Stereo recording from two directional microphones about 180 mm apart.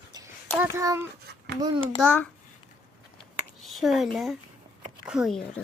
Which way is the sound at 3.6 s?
Centre (ahead or behind).